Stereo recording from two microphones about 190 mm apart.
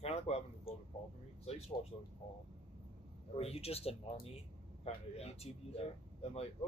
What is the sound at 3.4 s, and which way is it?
Speech, 30° left (ahead or behind).